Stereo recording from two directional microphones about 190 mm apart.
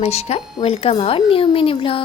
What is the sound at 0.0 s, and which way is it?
Speech, 35° left (ahead or behind).